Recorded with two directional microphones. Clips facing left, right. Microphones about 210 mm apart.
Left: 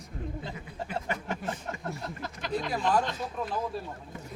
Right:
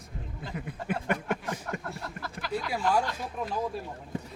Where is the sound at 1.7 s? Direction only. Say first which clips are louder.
Right 3 dB; 25° left (ahead or behind).